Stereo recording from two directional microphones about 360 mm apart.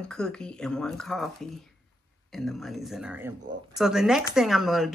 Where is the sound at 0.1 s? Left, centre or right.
Centre.